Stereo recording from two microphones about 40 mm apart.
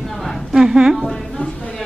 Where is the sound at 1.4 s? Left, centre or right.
Left.